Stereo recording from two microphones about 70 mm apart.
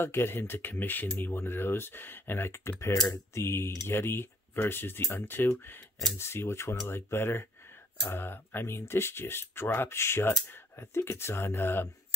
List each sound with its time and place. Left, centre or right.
0.0 s speech: left